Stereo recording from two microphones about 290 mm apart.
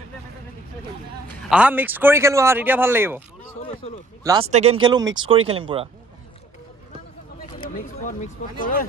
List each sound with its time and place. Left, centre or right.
1.5 s speech: centre
3.5 s a sound: left
4.2 s speech: centre
7.4 s speech: left